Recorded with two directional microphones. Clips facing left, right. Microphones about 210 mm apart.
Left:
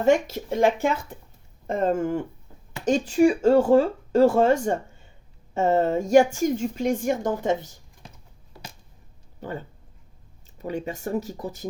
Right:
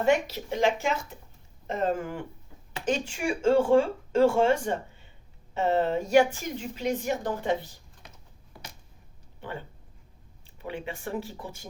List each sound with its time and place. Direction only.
0.0 s a woman's voice: 45° left (ahead or behind)
9.4 s speech: 40° left (ahead or behind)